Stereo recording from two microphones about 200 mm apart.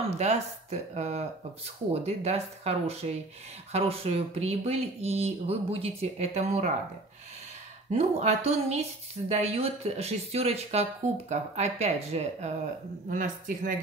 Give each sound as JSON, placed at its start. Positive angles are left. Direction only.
{"t": 0.2, "sound": "speech", "side_deg": -35}
{"t": 7.9, "sound": "speech", "side_deg": -35}